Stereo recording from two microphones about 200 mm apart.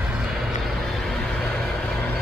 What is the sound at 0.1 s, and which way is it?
Vehicle, centre (ahead or behind).